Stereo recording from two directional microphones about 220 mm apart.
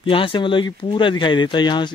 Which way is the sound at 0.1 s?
25° left (ahead or behind).